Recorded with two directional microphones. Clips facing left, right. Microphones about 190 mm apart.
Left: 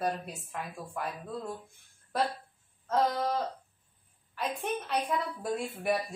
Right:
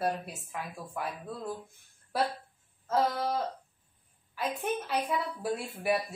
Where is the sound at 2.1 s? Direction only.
5° right (ahead or behind).